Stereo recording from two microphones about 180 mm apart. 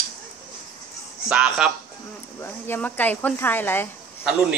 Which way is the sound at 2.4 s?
15° left (ahead or behind).